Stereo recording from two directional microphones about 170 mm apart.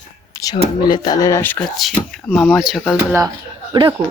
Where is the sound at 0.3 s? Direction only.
20° left (ahead or behind).